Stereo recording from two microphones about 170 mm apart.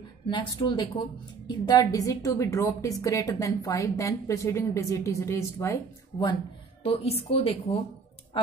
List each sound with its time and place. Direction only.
0.3 s a woman's voice: 25° left (ahead or behind)
6.8 s a woman's voice: 35° left (ahead or behind)